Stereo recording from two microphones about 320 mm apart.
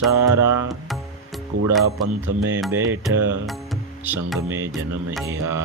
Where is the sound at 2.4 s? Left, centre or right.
Centre.